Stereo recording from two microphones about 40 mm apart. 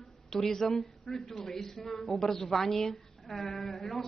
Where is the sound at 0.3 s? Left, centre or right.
Centre.